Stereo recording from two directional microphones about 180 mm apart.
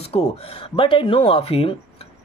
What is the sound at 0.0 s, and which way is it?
Speech, 35° left (ahead or behind).